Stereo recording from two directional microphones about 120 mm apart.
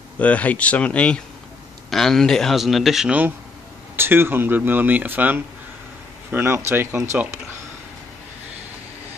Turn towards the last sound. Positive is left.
turn(degrees=-20)  # may be behind; listen again after turning